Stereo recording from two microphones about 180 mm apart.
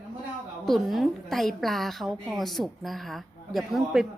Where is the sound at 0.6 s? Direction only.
Centre (ahead or behind).